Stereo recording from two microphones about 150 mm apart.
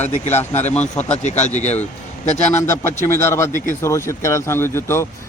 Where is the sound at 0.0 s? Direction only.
50° left (ahead or behind).